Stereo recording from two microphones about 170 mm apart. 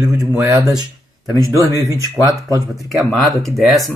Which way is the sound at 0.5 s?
20° right (ahead or behind).